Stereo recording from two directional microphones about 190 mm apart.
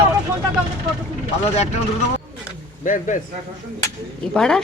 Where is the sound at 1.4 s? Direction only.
35° left (ahead or behind).